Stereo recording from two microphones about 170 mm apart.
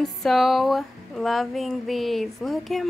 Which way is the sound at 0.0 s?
Centre (ahead or behind).